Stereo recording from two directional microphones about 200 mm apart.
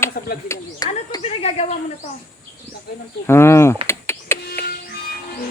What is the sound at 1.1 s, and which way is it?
Speech, 30° left (ahead or behind).